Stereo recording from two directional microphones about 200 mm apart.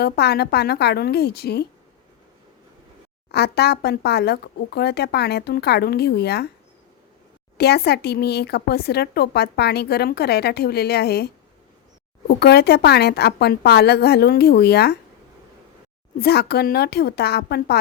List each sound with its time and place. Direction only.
0.0 s a woman's voice: 55° left (ahead or behind)
3.3 s a woman's voice: 55° left (ahead or behind)
7.6 s a woman's voice: 55° left (ahead or behind)
12.4 s a woman's voice: 55° left (ahead or behind)
16.2 s a woman's voice: 55° left (ahead or behind)